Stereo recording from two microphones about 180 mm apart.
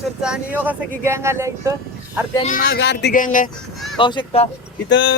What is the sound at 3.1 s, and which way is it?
Speech, 45° left (ahead or behind).